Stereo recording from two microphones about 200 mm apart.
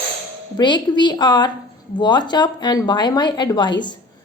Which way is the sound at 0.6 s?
20° left (ahead or behind).